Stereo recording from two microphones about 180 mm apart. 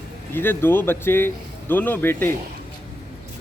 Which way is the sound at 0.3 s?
10° left (ahead or behind).